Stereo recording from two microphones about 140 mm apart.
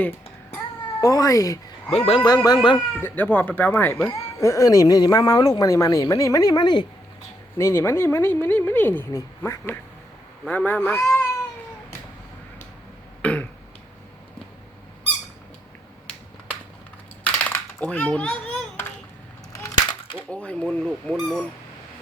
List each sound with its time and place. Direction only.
1.0 s speech: 25° left (ahead or behind)
1.9 s speech: 45° left (ahead or behind)
2.2 s speech: 30° left (ahead or behind)
2.7 s speech: 15° left (ahead or behind)
4.4 s speech: 20° left (ahead or behind)
7.6 s speech: 20° left (ahead or behind)
13.2 s burping: 10° left (ahead or behind)
17.2 s typing: 10° left (ahead or behind)
19.5 s a sound: 25° left (ahead or behind)
20.3 s speech: 10° left (ahead or behind)